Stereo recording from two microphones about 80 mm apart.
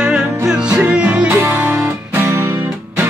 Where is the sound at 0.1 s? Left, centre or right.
Centre.